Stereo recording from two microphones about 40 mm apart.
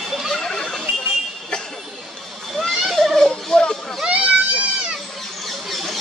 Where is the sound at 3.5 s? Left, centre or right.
Centre.